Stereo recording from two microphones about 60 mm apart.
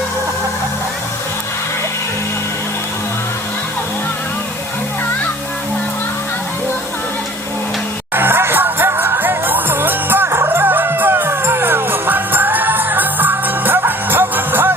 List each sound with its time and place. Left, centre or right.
8.1 s music: right